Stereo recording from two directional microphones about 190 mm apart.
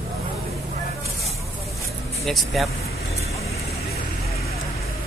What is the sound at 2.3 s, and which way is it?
Speech, centre (ahead or behind).